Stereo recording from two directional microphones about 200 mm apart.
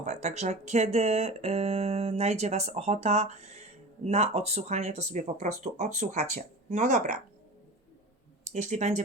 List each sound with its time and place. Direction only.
0.0 s speech: 35° right (ahead or behind)
8.4 s speech: 35° right (ahead or behind)